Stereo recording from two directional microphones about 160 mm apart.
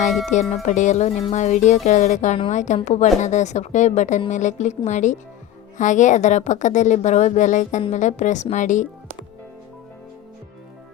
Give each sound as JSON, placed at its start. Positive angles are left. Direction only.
{"t": 0.3, "sound": "a woman's voice", "side_deg": 50}